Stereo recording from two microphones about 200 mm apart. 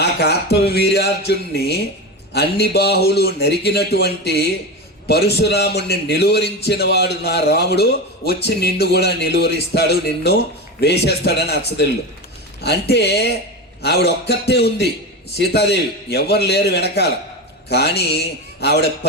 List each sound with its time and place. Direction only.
0.0 s a man's voice: 55° left (ahead or behind)